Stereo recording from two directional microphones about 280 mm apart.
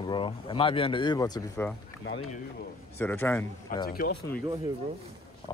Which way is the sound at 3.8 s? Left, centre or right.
Left.